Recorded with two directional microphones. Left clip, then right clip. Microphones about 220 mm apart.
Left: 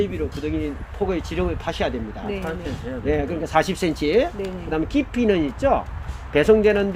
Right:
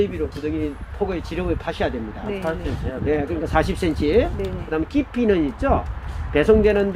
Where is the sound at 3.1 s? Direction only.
25° left (ahead or behind).